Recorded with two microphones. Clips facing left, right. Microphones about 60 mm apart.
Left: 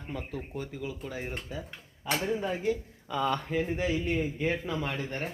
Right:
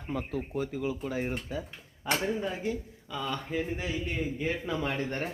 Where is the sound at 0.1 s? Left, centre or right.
Centre.